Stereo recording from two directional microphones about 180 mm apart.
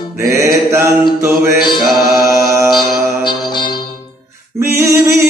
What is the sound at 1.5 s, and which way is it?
Mantra, 25° left (ahead or behind).